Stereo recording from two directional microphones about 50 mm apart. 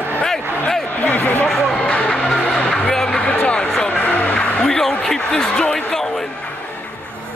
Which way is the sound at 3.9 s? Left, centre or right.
Left.